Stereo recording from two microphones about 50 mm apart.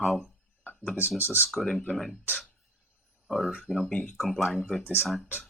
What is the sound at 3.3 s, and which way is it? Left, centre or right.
Speech, centre.